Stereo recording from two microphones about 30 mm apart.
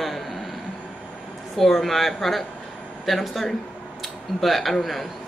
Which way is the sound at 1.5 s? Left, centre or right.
Centre.